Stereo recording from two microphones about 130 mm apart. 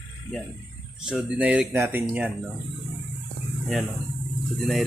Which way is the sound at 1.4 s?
10° right (ahead or behind).